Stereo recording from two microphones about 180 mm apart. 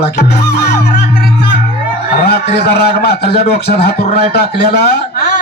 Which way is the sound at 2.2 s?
65° left (ahead or behind).